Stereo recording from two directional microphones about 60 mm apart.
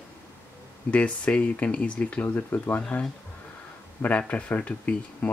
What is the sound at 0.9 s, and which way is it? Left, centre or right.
Speech, left.